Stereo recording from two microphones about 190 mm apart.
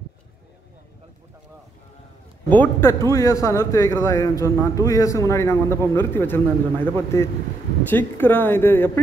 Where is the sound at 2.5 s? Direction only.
10° left (ahead or behind).